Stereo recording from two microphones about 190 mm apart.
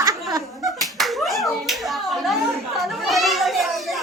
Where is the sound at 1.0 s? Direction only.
Centre (ahead or behind).